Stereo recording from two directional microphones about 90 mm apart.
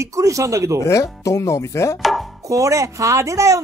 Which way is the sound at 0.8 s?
35° left (ahead or behind).